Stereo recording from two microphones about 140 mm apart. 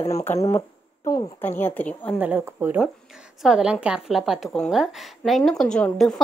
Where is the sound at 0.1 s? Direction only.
20° left (ahead or behind).